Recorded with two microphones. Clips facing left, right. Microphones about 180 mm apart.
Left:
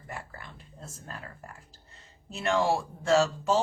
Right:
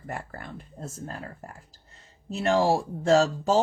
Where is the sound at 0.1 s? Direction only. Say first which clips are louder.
Right 6 dB; 50° right (ahead or behind).